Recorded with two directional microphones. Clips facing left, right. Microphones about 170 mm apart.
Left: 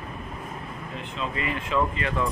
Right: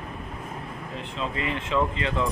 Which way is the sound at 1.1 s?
25° right (ahead or behind).